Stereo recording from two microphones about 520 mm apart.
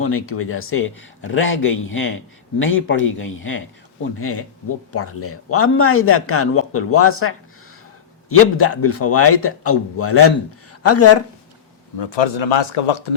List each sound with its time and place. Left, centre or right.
0.0 s a man's voice: left
11.9 s speech: left